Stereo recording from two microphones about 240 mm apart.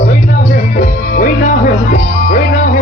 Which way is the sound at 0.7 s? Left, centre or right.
Left.